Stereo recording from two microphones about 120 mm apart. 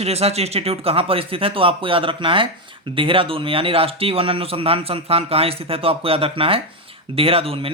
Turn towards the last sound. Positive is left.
turn(degrees=-55)  # may be behind; listen again after turning